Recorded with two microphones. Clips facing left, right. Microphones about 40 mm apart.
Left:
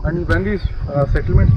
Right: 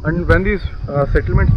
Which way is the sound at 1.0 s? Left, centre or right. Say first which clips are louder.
Right 2 dB; centre.